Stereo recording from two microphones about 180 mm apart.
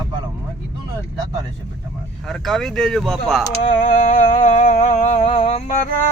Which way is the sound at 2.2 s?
Centre (ahead or behind).